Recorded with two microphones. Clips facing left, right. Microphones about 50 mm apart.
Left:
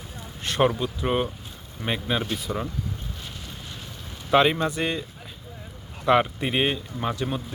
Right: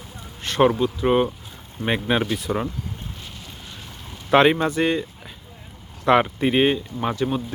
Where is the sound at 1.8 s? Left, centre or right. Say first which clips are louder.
Right 5 dB; right.